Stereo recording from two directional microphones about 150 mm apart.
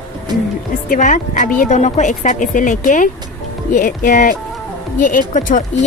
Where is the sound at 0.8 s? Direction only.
60° left (ahead or behind).